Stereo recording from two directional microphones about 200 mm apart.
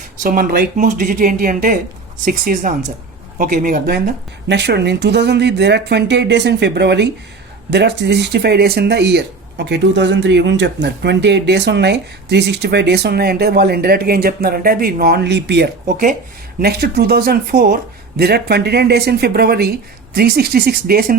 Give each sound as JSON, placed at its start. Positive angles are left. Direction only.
{"t": 0.2, "sound": "speech", "side_deg": -45}